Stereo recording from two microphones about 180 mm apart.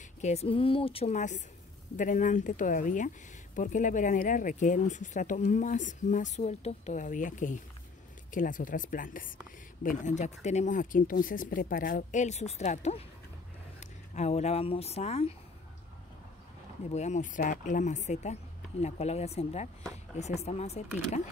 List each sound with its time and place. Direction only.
0.2 s speech: 35° left (ahead or behind)
16.9 s speech: 40° left (ahead or behind)